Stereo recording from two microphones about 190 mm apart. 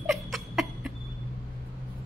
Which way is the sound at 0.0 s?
Centre (ahead or behind).